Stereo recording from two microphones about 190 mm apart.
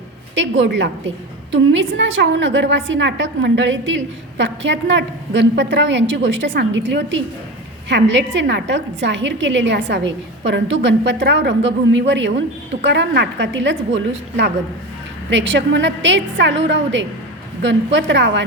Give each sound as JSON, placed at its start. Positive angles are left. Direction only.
{"t": 0.3, "sound": "a woman's voice", "side_deg": -75}